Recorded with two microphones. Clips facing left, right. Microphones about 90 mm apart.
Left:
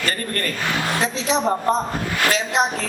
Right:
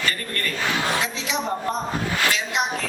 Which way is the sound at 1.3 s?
35° left (ahead or behind).